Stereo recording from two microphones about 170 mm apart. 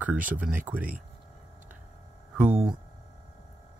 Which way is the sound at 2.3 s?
10° right (ahead or behind).